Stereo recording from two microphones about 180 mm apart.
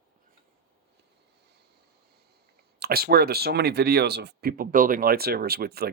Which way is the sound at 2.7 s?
60° right (ahead or behind).